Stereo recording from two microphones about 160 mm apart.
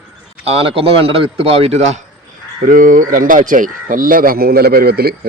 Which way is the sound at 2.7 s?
55° right (ahead or behind).